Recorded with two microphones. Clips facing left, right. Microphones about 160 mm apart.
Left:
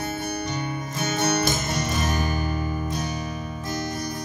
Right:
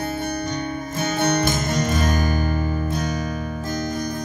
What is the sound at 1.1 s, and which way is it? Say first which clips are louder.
Music: right 3 dB; 55° right (ahead or behind).